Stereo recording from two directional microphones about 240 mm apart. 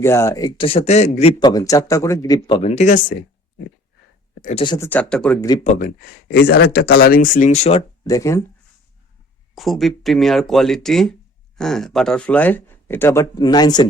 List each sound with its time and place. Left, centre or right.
0.0 s a man's voice: centre; by 3.2 s left
4.4 s a sound: left
4.6 s a man's voice: centre
4.9 s speech: centre
5.6 s speech: left
6.3 s speech: left
8.0 s a man's voice: centre
9.6 s a man's voice: centre